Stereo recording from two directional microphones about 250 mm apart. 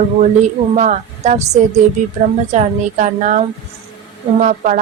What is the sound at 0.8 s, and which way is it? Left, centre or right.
A woman's voice, right.